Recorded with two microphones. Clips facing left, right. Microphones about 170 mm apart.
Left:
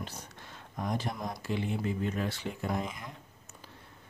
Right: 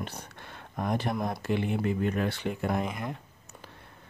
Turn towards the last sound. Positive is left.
turn(degrees=-60)  # may be behind; listen again after turning